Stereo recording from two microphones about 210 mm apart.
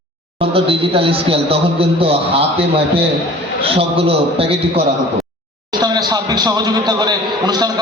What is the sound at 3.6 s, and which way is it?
A man's voice, 25° right (ahead or behind).